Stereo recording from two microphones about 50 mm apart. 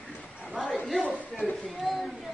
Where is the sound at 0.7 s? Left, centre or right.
Centre.